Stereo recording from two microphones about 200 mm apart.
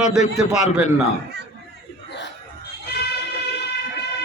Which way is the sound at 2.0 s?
60° left (ahead or behind).